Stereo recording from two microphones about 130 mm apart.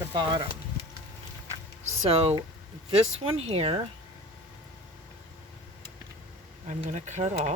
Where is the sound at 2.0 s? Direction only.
50° right (ahead or behind).